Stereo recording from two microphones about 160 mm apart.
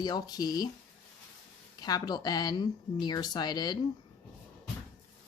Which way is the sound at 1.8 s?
25° left (ahead or behind).